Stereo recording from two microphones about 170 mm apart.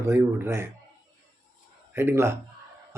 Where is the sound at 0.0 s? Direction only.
15° right (ahead or behind).